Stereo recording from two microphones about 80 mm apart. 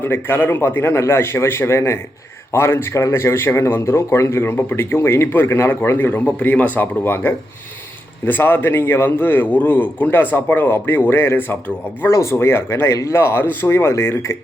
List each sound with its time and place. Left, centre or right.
0.0 s a man's voice: left